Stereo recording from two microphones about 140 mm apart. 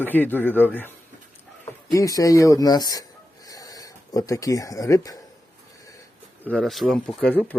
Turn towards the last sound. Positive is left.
turn(degrees=10)  # may be behind; listen again after turning